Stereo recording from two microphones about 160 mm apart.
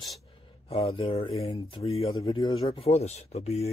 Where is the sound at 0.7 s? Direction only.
35° left (ahead or behind).